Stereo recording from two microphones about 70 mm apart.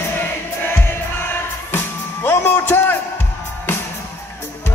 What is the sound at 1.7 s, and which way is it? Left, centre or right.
Music, left.